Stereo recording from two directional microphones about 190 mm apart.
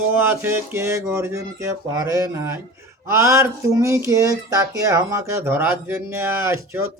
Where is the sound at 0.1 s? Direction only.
10° right (ahead or behind).